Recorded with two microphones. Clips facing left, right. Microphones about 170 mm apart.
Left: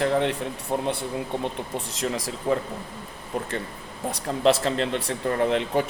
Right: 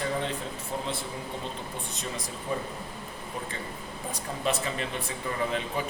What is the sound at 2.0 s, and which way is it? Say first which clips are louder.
Speech: left 8 dB; 90° left.